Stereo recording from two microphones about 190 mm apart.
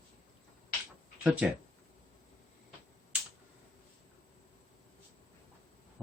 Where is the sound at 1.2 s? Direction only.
10° right (ahead or behind).